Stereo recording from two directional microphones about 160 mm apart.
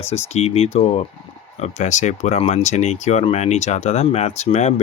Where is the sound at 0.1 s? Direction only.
40° left (ahead or behind).